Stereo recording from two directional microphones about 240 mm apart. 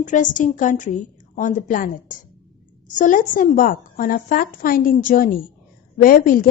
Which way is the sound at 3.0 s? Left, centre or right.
Left.